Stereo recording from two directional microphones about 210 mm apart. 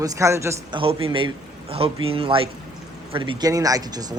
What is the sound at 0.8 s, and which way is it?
Speech, 25° right (ahead or behind).